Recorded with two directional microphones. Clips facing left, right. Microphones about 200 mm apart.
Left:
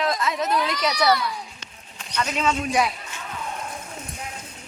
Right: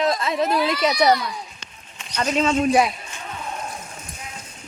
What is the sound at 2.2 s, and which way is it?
Speech, 30° right (ahead or behind).